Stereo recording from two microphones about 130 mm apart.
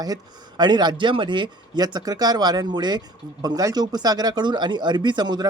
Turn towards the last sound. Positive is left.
turn(degrees=-35)  # may be behind; listen again after turning